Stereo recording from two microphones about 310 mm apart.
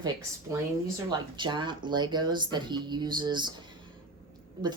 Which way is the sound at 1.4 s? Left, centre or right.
Centre.